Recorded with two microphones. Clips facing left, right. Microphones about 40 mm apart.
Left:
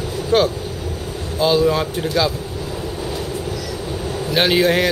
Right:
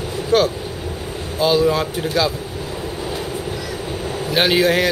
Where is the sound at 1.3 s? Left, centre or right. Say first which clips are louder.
Even; centre.